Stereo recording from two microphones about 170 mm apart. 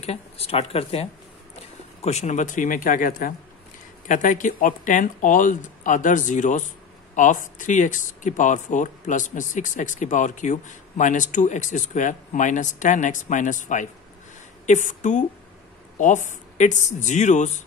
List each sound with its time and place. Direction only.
0.0 s speech: 35° left (ahead or behind)